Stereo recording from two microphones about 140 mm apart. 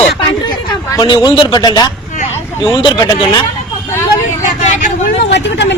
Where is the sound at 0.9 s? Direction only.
25° left (ahead or behind).